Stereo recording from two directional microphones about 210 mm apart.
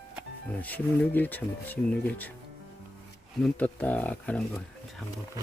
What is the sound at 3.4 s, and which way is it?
Speech, 5° left (ahead or behind).